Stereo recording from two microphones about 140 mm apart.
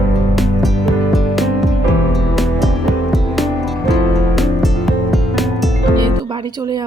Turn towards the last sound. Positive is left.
turn(degrees=-30)  # may be behind; listen again after turning